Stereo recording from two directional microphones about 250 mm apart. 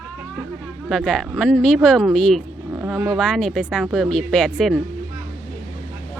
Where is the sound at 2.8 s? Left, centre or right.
Centre.